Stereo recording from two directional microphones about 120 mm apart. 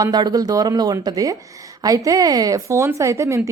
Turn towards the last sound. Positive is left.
turn(degrees=-25)  # may be behind; listen again after turning